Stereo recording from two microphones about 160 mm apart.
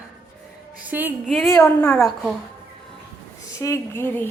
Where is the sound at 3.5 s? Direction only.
20° left (ahead or behind).